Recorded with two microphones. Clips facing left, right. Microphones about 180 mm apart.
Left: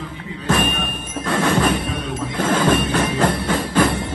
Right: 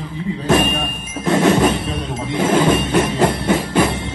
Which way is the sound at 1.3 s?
25° right (ahead or behind).